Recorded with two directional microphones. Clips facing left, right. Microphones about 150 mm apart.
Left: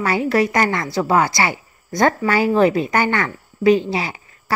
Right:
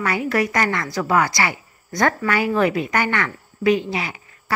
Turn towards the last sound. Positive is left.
turn(degrees=30)  # may be behind; listen again after turning